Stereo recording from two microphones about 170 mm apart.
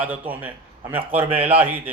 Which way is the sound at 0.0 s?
10° right (ahead or behind).